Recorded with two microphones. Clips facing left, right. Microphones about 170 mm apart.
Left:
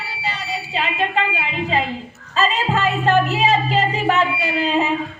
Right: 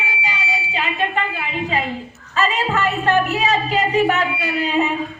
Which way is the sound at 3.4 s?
30° left (ahead or behind).